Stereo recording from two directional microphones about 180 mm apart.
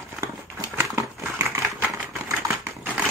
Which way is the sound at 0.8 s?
15° right (ahead or behind).